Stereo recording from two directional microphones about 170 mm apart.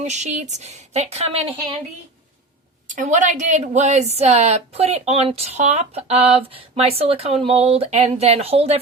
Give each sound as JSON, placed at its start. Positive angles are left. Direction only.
{"t": 0.0, "sound": "a woman's voice", "side_deg": -45}
{"t": 2.9, "sound": "a woman's voice", "side_deg": -45}